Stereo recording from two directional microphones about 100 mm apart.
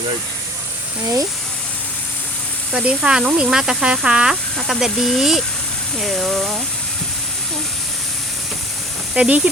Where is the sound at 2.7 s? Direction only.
10° right (ahead or behind).